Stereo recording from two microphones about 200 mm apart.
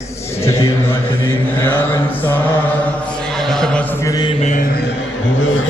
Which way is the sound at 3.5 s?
5° left (ahead or behind).